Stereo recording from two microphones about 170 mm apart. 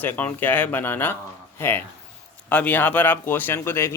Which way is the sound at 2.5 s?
10° left (ahead or behind).